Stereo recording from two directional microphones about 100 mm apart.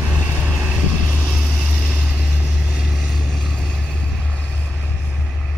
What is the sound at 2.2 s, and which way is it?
Vehicle, 10° right (ahead or behind).